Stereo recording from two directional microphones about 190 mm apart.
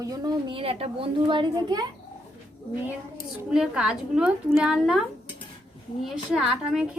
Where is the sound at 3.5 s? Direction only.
5° right (ahead or behind).